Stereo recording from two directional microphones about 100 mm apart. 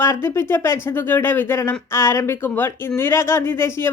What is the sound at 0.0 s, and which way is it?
Speech, 25° left (ahead or behind).